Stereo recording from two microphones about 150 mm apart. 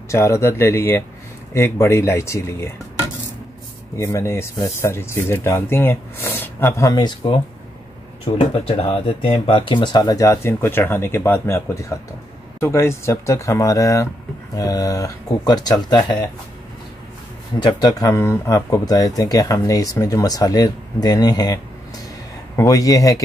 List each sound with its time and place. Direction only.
0.1 s speech: 20° left (ahead or behind)
4.0 s speech: 20° left (ahead or behind)
6.9 s speech: 30° left (ahead or behind)
8.6 s speech: 40° left (ahead or behind)
17.6 s speech: 30° left (ahead or behind)
22.6 s speech: 25° left (ahead or behind)